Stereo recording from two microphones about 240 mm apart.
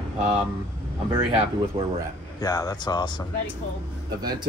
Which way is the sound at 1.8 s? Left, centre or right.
Right.